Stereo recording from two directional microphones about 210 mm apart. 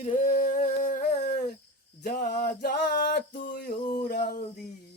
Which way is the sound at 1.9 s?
45° left (ahead or behind).